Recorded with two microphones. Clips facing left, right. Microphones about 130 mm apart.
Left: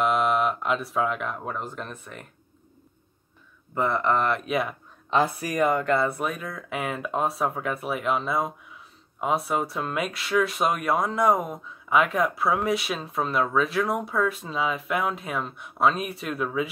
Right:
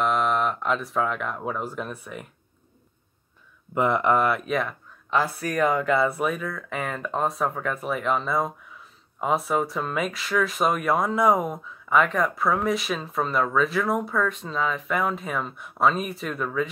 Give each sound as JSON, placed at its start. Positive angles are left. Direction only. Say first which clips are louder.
{"t": 0.0, "sound": "speech", "louder": "left 1 dB", "side_deg": 5}
{"t": 3.7, "sound": "speech", "louder": "right 3 dB", "side_deg": -15}
{"t": 4.5, "sound": "speech", "louder": "even", "side_deg": 10}
{"t": 5.1, "sound": "speech", "louder": "left 1 dB", "side_deg": 20}
{"t": 5.5, "sound": "speech", "louder": "right 2 dB", "side_deg": 0}